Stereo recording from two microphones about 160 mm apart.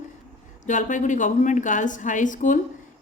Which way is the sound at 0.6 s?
50° left (ahead or behind).